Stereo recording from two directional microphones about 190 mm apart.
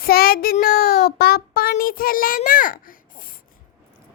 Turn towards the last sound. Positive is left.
turn(degrees=45)  # may be behind; listen again after turning